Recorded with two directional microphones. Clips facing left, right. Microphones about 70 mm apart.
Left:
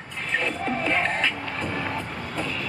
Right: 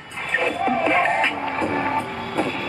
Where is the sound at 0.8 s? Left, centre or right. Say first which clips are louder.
Right 5 dB; centre.